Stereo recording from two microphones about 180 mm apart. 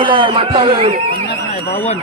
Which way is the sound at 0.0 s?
30° right (ahead or behind).